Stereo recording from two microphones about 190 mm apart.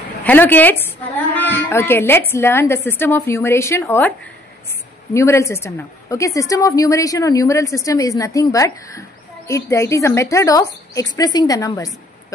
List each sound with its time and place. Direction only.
0.2 s a woman's voice: 10° left (ahead or behind)
5.1 s a woman's voice: 15° left (ahead or behind)